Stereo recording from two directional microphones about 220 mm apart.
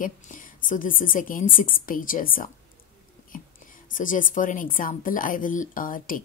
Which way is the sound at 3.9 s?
35° left (ahead or behind).